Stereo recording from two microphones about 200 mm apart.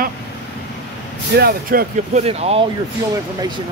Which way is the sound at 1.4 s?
50° right (ahead or behind).